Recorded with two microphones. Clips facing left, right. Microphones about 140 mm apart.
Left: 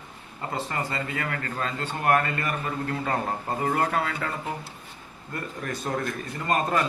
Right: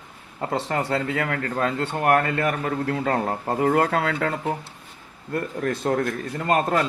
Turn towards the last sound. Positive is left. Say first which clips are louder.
# right 3 dB
turn(degrees=-70)  # may be behind; listen again after turning